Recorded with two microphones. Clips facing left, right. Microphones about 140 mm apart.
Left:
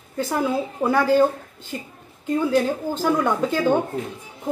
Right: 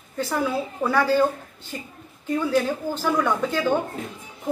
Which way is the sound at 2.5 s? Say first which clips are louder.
Left 2 dB; 20° left (ahead or behind).